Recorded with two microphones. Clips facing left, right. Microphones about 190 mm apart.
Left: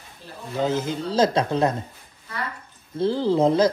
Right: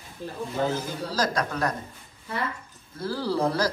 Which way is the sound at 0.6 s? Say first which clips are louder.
Left 5 dB; 20° left (ahead or behind).